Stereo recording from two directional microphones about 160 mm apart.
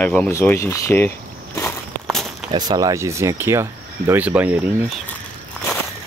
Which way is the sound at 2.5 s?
25° right (ahead or behind).